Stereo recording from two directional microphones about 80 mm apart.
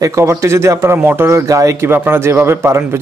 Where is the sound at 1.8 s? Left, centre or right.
Right.